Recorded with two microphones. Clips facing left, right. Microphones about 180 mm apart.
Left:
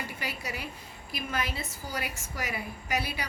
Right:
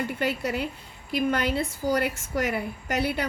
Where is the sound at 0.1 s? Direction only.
55° right (ahead or behind).